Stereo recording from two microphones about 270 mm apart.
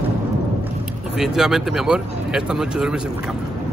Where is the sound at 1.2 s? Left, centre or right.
Centre.